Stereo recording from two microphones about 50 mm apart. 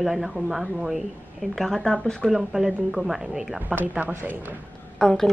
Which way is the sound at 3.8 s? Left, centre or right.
Right.